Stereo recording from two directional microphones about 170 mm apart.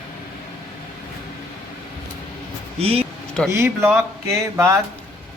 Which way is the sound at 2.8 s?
35° right (ahead or behind).